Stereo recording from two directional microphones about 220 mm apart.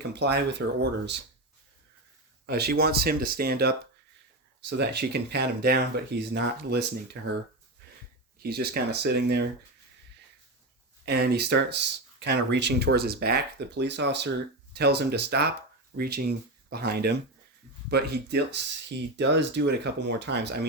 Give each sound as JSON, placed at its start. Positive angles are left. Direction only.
{"t": 0.1, "sound": "speech", "side_deg": -50}
{"t": 2.5, "sound": "speech", "side_deg": -45}
{"t": 8.4, "sound": "speech", "side_deg": -45}
{"t": 11.0, "sound": "speech", "side_deg": -50}